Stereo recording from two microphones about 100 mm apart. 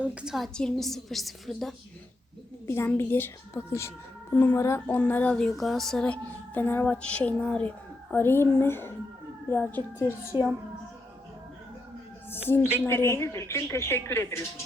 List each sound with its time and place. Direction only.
0.0 s a woman's voice: 10° right (ahead or behind)
0.3 s a woman's voice: 5° left (ahead or behind)
2.6 s a woman's voice: 25° left (ahead or behind)
4.9 s a child's voice: 15° left (ahead or behind)
10.1 s a child's voice: 20° right (ahead or behind)
12.8 s a woman's voice: 25° left (ahead or behind)